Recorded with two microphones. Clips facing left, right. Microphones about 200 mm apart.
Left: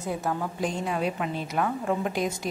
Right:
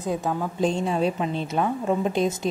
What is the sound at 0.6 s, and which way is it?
A woman's voice, 25° right (ahead or behind).